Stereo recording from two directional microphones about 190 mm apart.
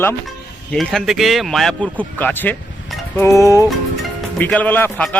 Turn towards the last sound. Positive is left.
turn(degrees=10)  # may be behind; listen again after turning